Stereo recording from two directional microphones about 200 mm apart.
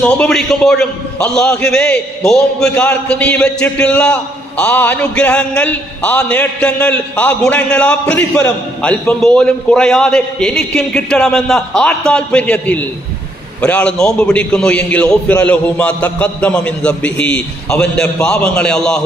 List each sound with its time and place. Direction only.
0.0 s a man's voice: 5° left (ahead or behind)